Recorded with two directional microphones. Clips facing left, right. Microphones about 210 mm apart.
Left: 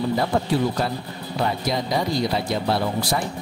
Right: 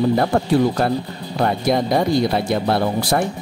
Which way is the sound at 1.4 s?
55° right (ahead or behind).